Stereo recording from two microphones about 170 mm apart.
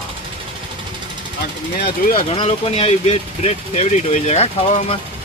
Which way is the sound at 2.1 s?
30° left (ahead or behind).